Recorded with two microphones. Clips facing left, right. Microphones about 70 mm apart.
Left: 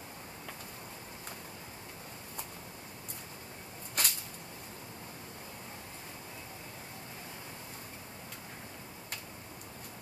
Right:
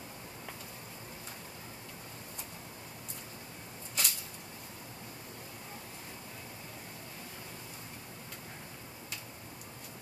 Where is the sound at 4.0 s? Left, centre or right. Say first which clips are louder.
Left 2 dB; left.